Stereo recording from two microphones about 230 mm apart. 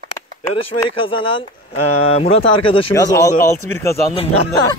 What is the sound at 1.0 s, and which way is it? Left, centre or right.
Speech, left.